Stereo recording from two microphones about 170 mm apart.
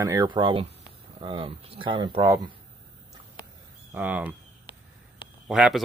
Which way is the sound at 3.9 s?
10° right (ahead or behind).